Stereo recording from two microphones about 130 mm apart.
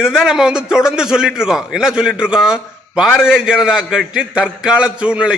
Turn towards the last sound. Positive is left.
turn(degrees=-5)  # may be behind; listen again after turning